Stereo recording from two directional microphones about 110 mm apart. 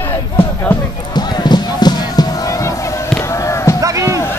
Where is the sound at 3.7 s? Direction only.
30° right (ahead or behind).